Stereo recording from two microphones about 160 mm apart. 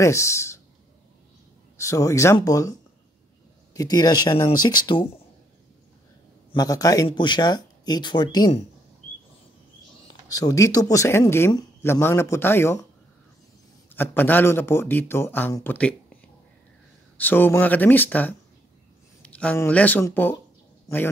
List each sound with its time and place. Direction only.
0.0 s speech: 20° left (ahead or behind)
1.8 s speech: 20° left (ahead or behind)
3.7 s speech: 25° left (ahead or behind)
6.5 s speech: 20° left (ahead or behind)
10.2 s speech: 20° left (ahead or behind)
13.9 s speech: 10° left (ahead or behind)
17.2 s speech: 10° left (ahead or behind)